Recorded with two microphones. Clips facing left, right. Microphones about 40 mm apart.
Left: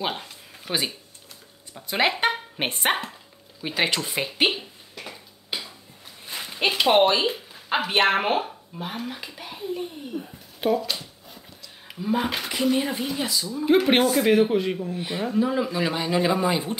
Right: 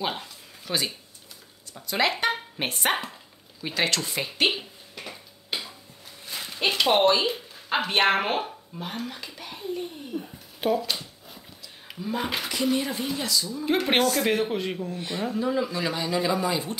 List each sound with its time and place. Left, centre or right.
0.0 s speech: centre
4.5 s a sound: centre
6.2 s a sound: centre
7.7 s speech: centre
12.7 s speech: centre
15.0 s speech: centre